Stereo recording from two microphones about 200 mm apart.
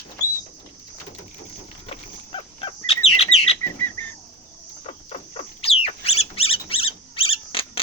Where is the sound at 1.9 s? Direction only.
30° left (ahead or behind).